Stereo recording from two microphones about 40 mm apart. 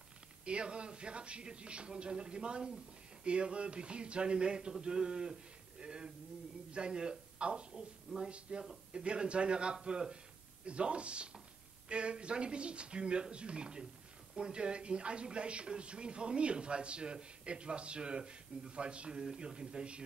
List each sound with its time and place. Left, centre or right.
0.5 s speech: right